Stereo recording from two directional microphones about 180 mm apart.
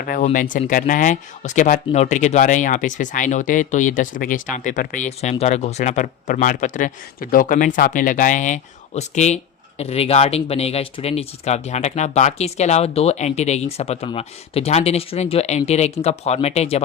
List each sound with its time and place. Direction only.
0.0 s speech: 50° left (ahead or behind)